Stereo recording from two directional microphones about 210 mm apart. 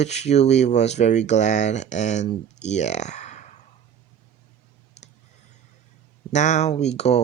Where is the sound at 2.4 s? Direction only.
35° left (ahead or behind).